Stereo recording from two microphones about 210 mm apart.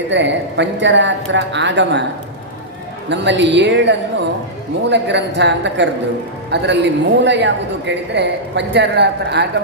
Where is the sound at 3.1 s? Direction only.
55° right (ahead or behind).